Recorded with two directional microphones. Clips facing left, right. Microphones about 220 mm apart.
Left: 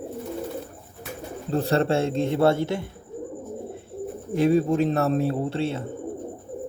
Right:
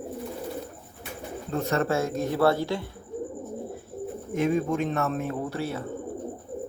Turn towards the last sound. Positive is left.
turn(degrees=25)  # may be behind; listen again after turning